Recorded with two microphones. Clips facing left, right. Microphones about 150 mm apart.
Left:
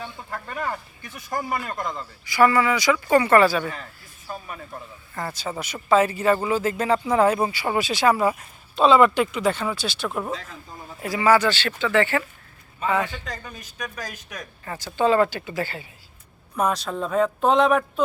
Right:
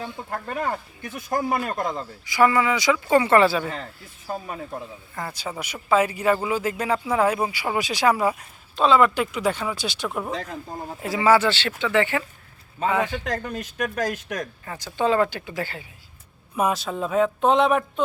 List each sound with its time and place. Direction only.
0.0 s speech: 45° right (ahead or behind)
1.5 s speech: 25° right (ahead or behind)
5.1 s speech: 10° right (ahead or behind)
8.3 s speech: centre (ahead or behind); by 10.1 s 15° right (ahead or behind)
10.1 s speech: centre (ahead or behind)
10.5 s speech: 45° right (ahead or behind)
11.0 s speech: 25° right (ahead or behind)
11.7 s speech: 15° right (ahead or behind)
13.1 s speech: 55° right (ahead or behind)
14.9 s speech: 15° right (ahead or behind)
15.4 s speech: centre (ahead or behind)